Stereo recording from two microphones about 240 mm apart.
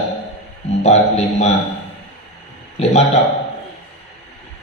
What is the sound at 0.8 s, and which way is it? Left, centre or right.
Speech, left.